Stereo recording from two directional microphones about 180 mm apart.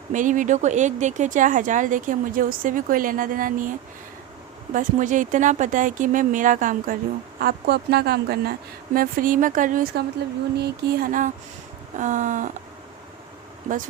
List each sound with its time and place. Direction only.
0.1 s speech: 45° right (ahead or behind)
7.4 s speech: 60° right (ahead or behind)
9.0 s speech: 50° right (ahead or behind)